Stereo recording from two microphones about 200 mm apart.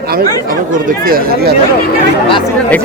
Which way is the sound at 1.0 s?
50° right (ahead or behind).